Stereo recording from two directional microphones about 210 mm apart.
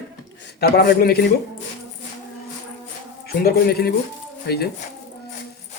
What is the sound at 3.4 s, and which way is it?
A man's voice, 50° left (ahead or behind).